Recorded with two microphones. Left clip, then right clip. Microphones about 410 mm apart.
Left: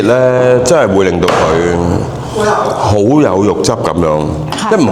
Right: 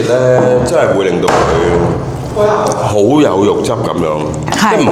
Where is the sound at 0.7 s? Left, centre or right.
Left.